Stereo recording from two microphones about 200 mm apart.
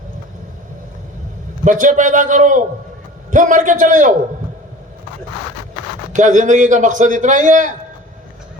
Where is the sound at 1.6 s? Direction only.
40° right (ahead or behind).